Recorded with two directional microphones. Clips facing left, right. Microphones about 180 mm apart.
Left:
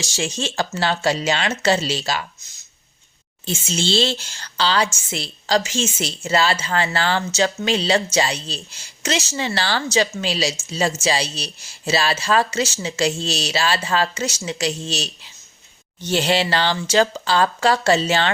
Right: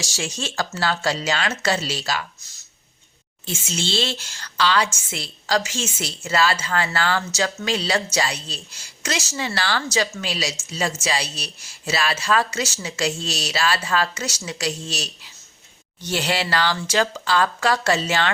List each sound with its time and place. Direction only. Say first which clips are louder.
0.0 s a woman's voice: left 4 dB; 25° left (ahead or behind)
3.4 s a woman's voice: left 4 dB; 30° left (ahead or behind)